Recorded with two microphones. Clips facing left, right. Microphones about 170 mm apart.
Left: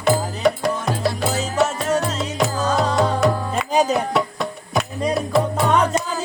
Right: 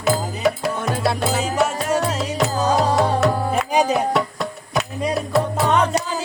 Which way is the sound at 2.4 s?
Centre (ahead or behind).